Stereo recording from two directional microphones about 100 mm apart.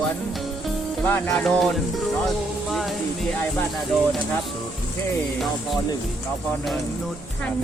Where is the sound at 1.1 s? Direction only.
25° left (ahead or behind).